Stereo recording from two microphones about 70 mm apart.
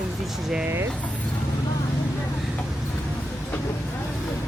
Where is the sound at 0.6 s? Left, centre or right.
Right.